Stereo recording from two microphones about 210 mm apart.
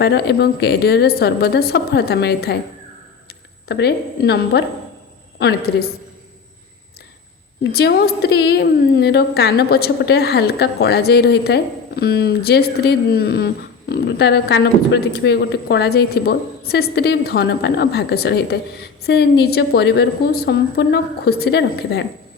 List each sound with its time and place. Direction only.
0.0 s a woman's voice: 50° left (ahead or behind)
3.7 s a woman's voice: 50° left (ahead or behind)
7.6 s a woman's voice: 50° left (ahead or behind)